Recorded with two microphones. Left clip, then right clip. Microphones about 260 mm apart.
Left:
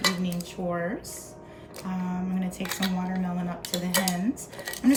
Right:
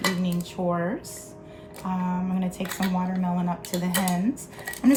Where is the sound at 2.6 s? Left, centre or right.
Centre.